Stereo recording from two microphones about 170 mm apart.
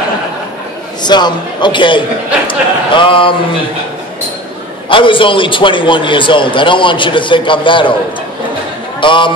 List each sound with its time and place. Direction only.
1.0 s a man's voice: 25° left (ahead or behind)
4.8 s a man's voice: 30° left (ahead or behind)
9.0 s a man's voice: 30° left (ahead or behind)